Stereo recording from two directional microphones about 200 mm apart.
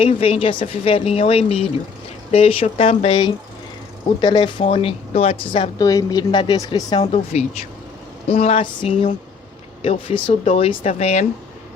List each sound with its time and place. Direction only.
0.0 s speech: 30° left (ahead or behind)